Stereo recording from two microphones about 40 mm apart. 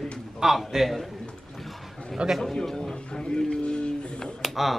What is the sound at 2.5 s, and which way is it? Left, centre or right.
Speech, centre.